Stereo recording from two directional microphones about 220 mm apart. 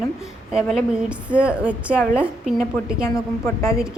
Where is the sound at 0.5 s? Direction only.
5° right (ahead or behind).